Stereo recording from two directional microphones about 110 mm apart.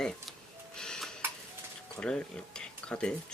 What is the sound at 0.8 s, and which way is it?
Tick-tock, 5° left (ahead or behind).